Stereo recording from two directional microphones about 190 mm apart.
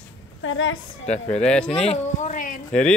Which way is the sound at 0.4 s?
90° left.